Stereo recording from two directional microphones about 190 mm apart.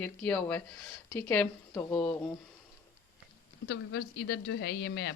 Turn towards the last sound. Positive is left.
turn(degrees=60)  # may be behind; listen again after turning